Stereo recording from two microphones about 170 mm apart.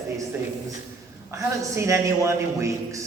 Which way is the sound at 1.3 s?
15° right (ahead or behind).